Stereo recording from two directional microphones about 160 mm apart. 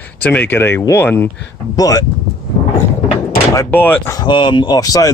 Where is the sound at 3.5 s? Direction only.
15° left (ahead or behind).